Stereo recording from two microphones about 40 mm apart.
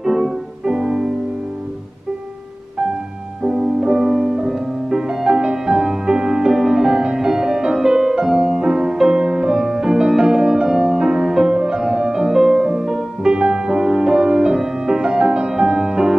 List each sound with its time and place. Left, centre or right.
0.0 s music: centre
3.4 s music: centre
4.8 s music: centre